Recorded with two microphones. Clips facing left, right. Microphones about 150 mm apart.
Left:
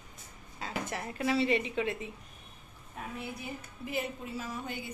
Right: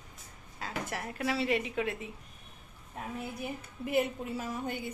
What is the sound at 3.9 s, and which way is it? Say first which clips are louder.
Speech: right 6 dB; 50° right (ahead or behind).